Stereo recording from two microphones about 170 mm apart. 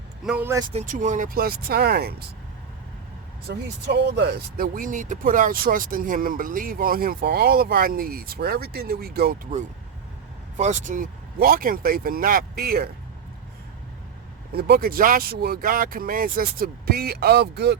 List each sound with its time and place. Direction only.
0.3 s speech: 10° right (ahead or behind)
0.7 s speech: 45° right (ahead or behind); by 2.2 s 70° right (ahead or behind)
3.5 s speech: 80° right; by 9.4 s 65° right (ahead or behind)
10.6 s speech: 45° right (ahead or behind); by 12.9 s 65° right (ahead or behind)
14.5 s speech: 65° right (ahead or behind)